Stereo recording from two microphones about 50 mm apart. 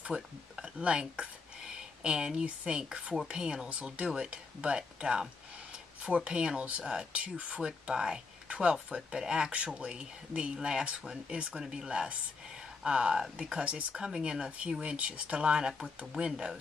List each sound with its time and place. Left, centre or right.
0.0 s speech: right
4.0 s speech: centre